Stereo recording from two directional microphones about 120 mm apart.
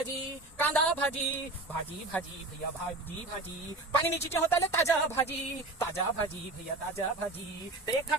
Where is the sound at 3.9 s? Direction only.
20° left (ahead or behind).